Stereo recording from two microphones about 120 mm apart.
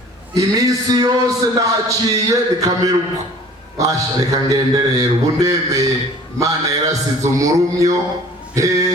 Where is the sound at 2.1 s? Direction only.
30° right (ahead or behind).